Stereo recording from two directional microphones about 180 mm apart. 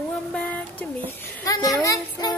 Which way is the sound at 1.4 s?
20° left (ahead or behind).